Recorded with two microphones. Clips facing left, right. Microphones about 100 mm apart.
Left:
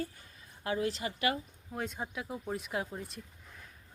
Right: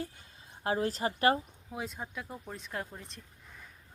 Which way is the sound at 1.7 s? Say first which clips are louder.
Left 2 dB; 5° right (ahead or behind).